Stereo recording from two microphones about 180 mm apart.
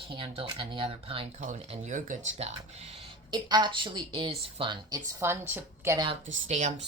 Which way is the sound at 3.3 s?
25° right (ahead or behind).